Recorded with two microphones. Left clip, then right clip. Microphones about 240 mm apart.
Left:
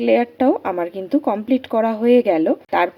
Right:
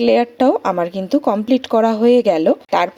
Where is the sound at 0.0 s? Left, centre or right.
Right.